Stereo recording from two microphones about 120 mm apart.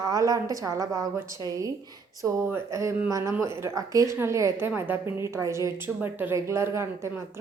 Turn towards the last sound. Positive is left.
turn(degrees=-20)  # may be behind; listen again after turning